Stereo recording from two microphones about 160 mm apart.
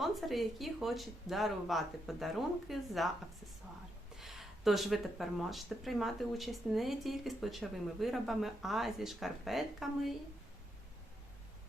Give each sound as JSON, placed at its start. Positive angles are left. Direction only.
{"t": 0.0, "sound": "speech", "side_deg": 0}
{"t": 4.2, "sound": "speech", "side_deg": 0}